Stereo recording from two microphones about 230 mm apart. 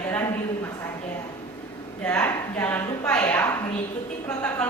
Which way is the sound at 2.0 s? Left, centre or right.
Centre.